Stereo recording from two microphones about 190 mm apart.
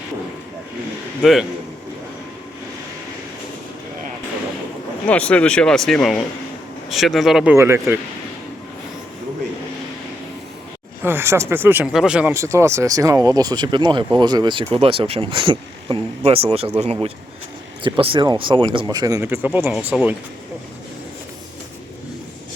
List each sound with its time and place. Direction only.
1.2 s speech: centre (ahead or behind)
5.0 s speech: 5° left (ahead or behind)
7.5 s speech: 15° right (ahead or behind)
11.0 s speech: 10° right (ahead or behind)